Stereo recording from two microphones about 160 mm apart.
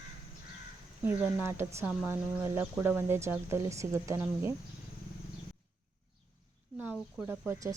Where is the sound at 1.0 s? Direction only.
15° right (ahead or behind).